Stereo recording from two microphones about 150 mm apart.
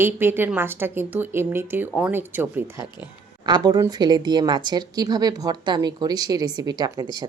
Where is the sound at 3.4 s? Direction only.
25° right (ahead or behind).